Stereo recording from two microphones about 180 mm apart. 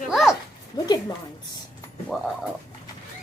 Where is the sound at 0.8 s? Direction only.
20° left (ahead or behind).